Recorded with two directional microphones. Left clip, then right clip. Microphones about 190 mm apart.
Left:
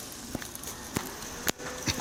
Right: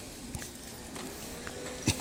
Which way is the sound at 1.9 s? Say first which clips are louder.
Left 1 dB; 55° right (ahead or behind).